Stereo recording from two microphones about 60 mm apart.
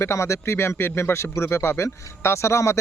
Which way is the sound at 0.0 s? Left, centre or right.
Left.